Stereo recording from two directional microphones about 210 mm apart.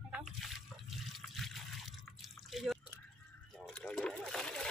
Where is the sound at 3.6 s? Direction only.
5° left (ahead or behind).